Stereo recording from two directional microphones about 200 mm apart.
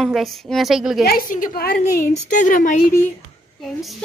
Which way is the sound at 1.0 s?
45° left (ahead or behind).